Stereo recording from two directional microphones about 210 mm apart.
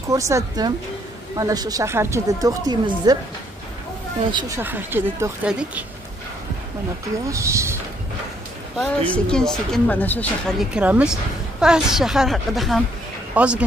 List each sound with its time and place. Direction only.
0.1 s speech: 15° right (ahead or behind)
4.3 s speech: 20° right (ahead or behind)
7.2 s speech: 15° right (ahead or behind)
8.7 s speech: 5° left (ahead or behind)